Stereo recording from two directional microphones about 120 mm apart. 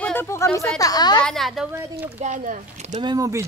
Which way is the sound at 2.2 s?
90° right.